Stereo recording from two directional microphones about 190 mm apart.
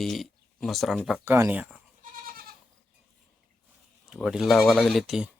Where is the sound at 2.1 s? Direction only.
50° right (ahead or behind).